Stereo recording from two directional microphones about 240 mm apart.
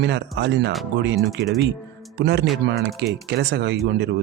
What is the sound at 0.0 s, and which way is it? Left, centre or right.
Speech, right.